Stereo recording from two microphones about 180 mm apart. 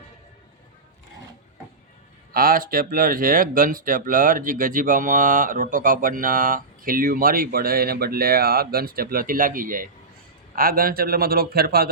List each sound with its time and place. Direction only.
2.3 s speech: 55° right (ahead or behind)